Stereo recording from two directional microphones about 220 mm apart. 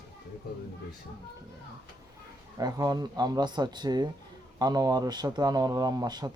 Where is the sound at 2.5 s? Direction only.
15° right (ahead or behind).